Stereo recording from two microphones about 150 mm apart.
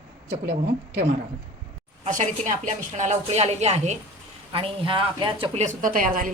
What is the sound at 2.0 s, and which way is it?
A woman's voice, 55° right (ahead or behind).